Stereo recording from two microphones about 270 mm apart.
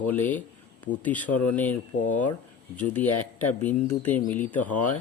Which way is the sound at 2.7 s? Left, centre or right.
Centre.